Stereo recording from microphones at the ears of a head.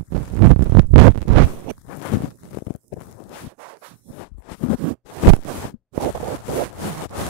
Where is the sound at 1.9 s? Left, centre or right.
Left.